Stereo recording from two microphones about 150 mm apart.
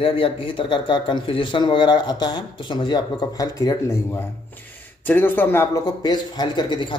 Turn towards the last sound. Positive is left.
turn(degrees=30)  # may be behind; listen again after turning